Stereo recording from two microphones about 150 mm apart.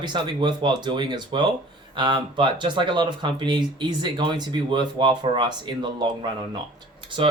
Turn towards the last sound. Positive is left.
turn(degrees=-30)  # may be behind; listen again after turning